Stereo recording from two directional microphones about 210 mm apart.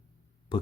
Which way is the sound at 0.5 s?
25° left (ahead or behind).